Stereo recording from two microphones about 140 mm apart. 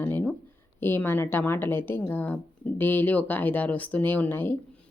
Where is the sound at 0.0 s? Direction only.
15° left (ahead or behind).